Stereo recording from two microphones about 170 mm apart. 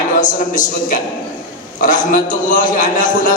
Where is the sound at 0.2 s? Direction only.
50° left (ahead or behind).